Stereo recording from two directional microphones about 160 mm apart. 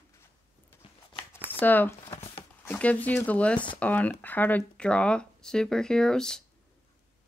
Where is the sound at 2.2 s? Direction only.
35° left (ahead or behind).